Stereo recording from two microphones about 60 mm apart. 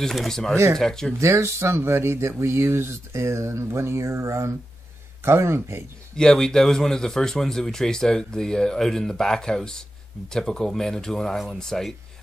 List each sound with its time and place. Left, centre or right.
0.0 s speech: centre
1.2 s speech: right
6.1 s speech: centre